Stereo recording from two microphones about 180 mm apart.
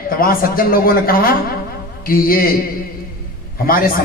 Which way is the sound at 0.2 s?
55° left (ahead or behind).